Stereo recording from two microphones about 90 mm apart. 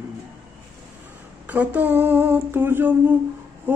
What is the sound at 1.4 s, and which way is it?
Music, 15° right (ahead or behind).